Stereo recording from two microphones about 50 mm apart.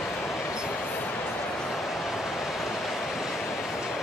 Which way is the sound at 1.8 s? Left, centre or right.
Centre.